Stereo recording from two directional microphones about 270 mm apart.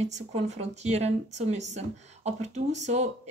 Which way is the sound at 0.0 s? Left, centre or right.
Right.